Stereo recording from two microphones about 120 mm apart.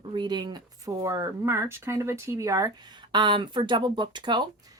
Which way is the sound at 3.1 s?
40° right (ahead or behind).